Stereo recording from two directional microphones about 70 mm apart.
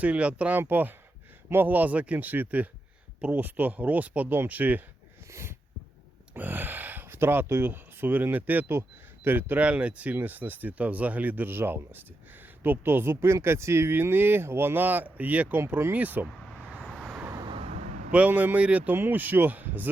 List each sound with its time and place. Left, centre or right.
0.0 s speech: centre
5.3 s a sound: right
6.3 s speech: right
9.6 s speech: centre
16.2 s vehicle: centre
18.1 s speech: right